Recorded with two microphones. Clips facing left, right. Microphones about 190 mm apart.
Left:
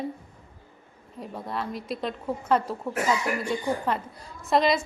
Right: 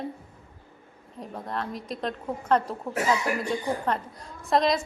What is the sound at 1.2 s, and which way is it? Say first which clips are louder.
A woman's voice: even; 5° left (ahead or behind).